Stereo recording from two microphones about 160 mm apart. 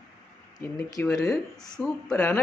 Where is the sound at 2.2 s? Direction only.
15° left (ahead or behind).